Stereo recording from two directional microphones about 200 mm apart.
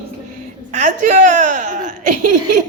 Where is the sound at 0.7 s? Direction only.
40° right (ahead or behind).